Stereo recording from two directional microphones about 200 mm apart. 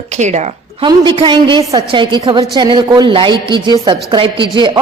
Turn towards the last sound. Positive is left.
turn(degrees=-25)  # may be behind; listen again after turning